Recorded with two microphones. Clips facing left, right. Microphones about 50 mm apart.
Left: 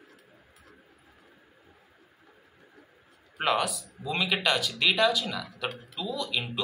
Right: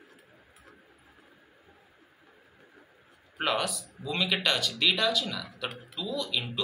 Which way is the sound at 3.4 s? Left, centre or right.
Centre.